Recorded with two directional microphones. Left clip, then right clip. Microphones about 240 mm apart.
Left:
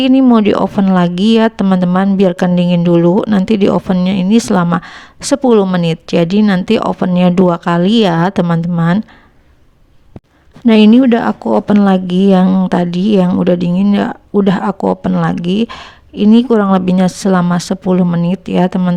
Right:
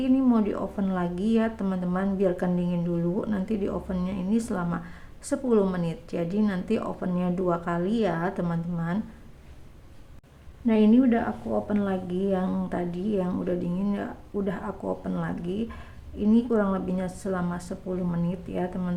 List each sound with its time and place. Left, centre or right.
0.0 s speech: left
10.7 s speech: left
12.5 s speech: left
12.7 s speech: left